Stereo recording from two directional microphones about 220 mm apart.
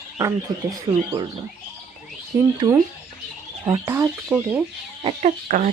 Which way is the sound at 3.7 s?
15° right (ahead or behind).